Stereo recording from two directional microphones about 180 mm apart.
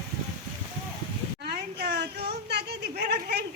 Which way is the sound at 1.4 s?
65° right (ahead or behind).